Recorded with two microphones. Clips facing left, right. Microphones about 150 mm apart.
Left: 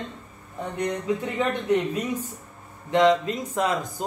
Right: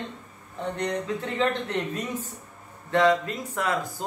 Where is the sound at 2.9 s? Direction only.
20° left (ahead or behind).